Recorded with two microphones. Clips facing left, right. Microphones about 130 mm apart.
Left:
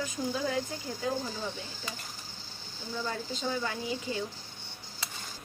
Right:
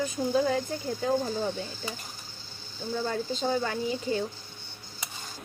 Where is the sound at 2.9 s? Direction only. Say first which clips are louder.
Right 5 dB; 45° right (ahead or behind).